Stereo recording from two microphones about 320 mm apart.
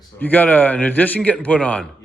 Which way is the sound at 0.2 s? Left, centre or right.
Centre.